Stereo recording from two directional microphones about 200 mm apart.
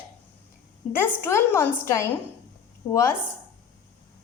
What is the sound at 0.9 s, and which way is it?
Speech, 10° left (ahead or behind).